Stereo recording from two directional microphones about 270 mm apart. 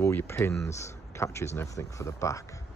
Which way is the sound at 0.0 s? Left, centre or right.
Centre.